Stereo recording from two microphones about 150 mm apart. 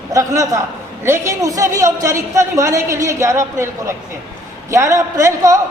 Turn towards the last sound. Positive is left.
turn(degrees=-20)  # may be behind; listen again after turning